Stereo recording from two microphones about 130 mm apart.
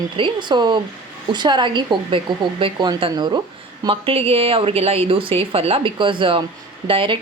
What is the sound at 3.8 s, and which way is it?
A woman's voice, 45° right (ahead or behind).